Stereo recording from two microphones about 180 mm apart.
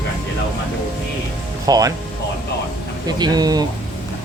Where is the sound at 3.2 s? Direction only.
20° right (ahead or behind).